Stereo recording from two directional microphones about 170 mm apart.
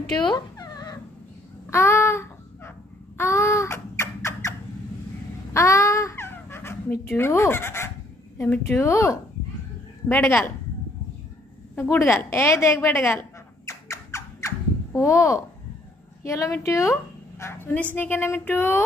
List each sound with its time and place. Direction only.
0.3 s dog: 25° left (ahead or behind)
1.7 s a sound: 15° left (ahead or behind)
5.5 s babbling: 15° left (ahead or behind)
8.4 s speech: 10° left (ahead or behind)
11.7 s a sound: 15° left (ahead or behind)
16.3 s a woman's voice: 20° left (ahead or behind)